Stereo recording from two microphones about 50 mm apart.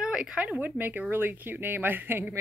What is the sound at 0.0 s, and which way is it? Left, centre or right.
Speech, centre.